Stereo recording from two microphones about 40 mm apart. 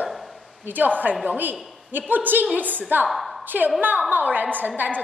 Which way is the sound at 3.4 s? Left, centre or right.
Right.